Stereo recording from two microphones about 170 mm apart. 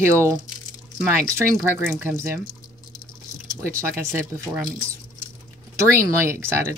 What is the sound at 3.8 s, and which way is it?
Speech, 15° right (ahead or behind).